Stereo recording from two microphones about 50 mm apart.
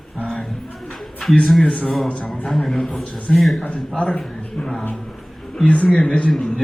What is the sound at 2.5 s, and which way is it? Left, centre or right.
A man's voice, centre.